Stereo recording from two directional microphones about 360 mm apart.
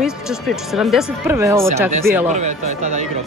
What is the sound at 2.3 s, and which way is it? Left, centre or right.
Speech, centre.